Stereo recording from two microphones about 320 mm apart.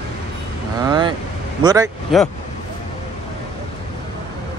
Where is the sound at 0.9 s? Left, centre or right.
Centre.